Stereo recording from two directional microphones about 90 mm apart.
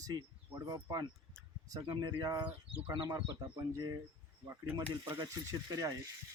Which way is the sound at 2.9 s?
50° right (ahead or behind).